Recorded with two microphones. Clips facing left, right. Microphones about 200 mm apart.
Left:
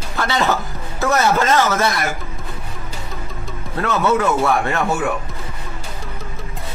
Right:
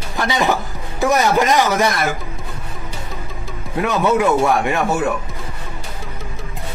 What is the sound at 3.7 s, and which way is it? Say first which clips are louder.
Speech: right 1 dB; 15° right (ahead or behind).